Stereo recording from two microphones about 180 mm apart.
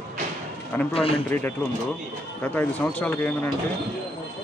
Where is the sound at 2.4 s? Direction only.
10° left (ahead or behind).